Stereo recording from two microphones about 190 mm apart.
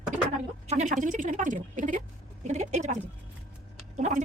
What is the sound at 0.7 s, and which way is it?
A woman's voice, 40° right (ahead or behind).